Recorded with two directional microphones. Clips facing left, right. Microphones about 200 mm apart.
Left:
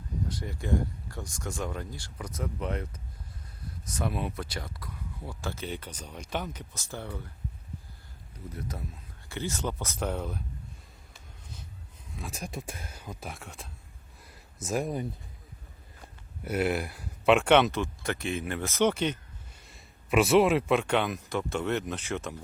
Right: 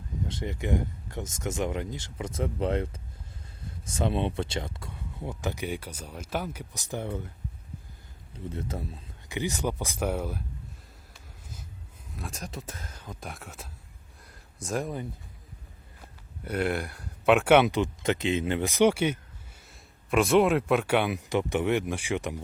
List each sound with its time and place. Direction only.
0.3 s speech: 25° right (ahead or behind)
8.4 s speech: 30° right (ahead or behind)
9.3 s speech: 15° right (ahead or behind)
12.1 s speech: 5° left (ahead or behind)
14.3 s a sound: 5° left (ahead or behind)
16.4 s speech: 5° left (ahead or behind)
17.7 s speech: 20° right (ahead or behind)